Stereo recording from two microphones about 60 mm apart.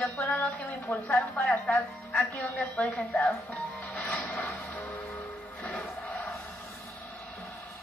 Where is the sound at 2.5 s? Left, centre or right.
Left.